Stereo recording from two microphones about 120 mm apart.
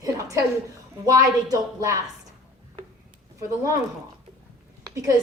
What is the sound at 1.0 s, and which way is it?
Speech, 30° right (ahead or behind).